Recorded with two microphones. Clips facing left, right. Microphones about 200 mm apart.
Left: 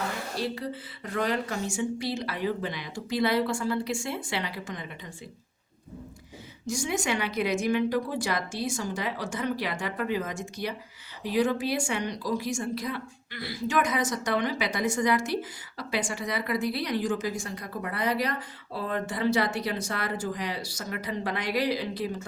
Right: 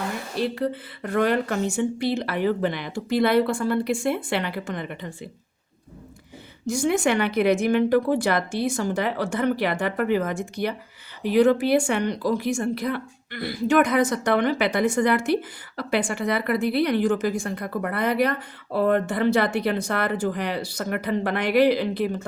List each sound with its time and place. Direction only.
0.3 s a woman's voice: 60° right (ahead or behind)
6.7 s a woman's voice: 60° right (ahead or behind)